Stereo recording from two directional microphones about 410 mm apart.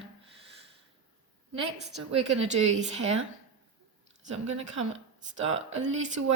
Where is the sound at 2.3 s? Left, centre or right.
Right.